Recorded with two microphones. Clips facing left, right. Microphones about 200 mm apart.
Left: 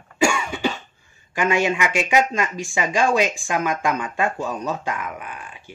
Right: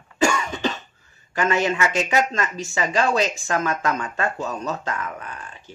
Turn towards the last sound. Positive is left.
turn(degrees=10)  # may be behind; listen again after turning